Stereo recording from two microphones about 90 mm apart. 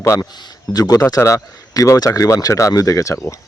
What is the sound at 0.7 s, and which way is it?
Speech, 45° left (ahead or behind).